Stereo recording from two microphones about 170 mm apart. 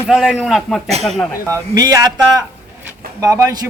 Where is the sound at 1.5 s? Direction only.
20° right (ahead or behind).